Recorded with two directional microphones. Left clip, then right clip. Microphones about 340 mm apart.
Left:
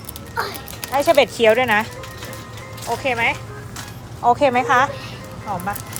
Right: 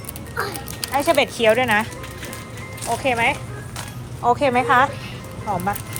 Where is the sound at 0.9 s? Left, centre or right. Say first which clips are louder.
Left 3 dB; centre.